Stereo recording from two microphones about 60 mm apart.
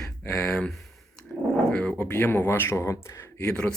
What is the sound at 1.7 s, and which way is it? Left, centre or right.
Speech, left.